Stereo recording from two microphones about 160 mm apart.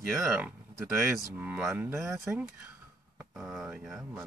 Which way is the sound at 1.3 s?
10° right (ahead or behind).